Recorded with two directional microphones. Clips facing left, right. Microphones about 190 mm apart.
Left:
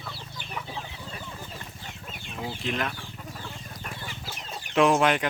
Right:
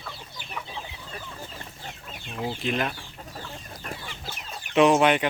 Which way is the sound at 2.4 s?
35° right (ahead or behind).